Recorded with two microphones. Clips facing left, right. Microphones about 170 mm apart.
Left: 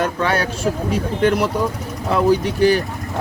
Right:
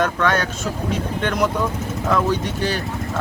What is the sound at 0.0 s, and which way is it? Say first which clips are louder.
Speech: even; 10° left (ahead or behind).